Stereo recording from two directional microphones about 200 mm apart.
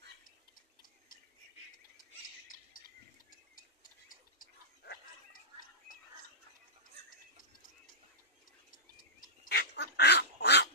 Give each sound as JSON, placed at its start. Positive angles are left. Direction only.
{"t": 2.0, "sound": "bird", "side_deg": 45}
{"t": 4.1, "sound": "a sound", "side_deg": 45}
{"t": 8.9, "sound": "duck", "side_deg": 45}